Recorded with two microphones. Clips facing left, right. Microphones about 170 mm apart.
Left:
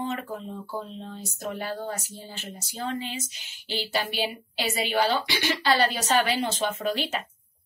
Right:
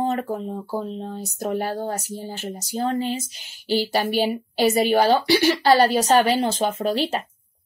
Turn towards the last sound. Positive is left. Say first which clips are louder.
# right 5 dB
turn(degrees=-35)  # may be behind; listen again after turning